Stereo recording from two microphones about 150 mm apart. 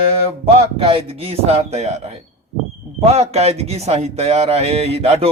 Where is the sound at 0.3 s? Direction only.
40° right (ahead or behind).